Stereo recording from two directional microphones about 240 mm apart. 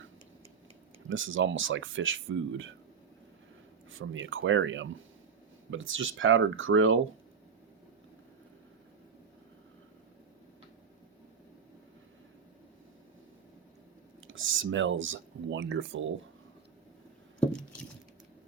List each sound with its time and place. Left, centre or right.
1.1 s speech: right
3.9 s speech: right
14.3 s speech: right
17.5 s a sound: centre